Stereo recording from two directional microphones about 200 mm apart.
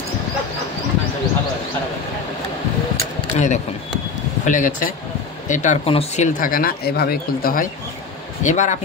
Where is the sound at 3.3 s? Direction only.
35° left (ahead or behind).